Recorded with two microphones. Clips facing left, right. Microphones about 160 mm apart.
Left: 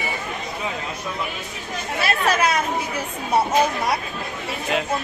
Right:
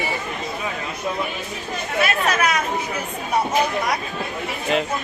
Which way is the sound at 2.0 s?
30° left (ahead or behind).